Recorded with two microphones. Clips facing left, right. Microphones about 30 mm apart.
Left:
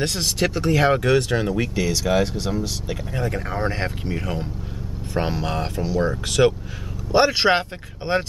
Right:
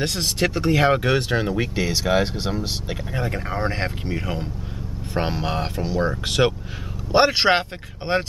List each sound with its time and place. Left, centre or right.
0.0 s speech: centre